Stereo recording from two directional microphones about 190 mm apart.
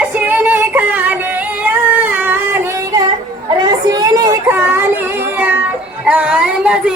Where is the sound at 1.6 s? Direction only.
10° right (ahead or behind).